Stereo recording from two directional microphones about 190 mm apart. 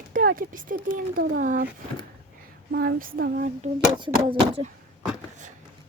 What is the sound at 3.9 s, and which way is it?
Speech, 25° right (ahead or behind).